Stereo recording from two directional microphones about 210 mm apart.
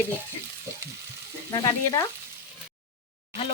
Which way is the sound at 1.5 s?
20° left (ahead or behind).